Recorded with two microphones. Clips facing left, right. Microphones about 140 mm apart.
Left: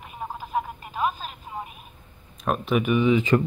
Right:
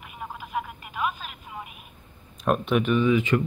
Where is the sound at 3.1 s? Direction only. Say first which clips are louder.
Left 2 dB; 35° left (ahead or behind).